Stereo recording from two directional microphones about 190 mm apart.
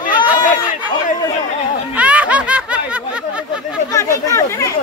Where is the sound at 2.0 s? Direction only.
5° right (ahead or behind).